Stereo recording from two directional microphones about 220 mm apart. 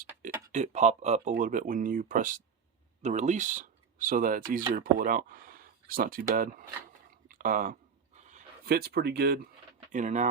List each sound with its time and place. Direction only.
0.0 s speech: 35° right (ahead or behind)
7.3 s a sound: 40° right (ahead or behind)
8.2 s speech: 35° right (ahead or behind)
9.9 s speech: 35° right (ahead or behind)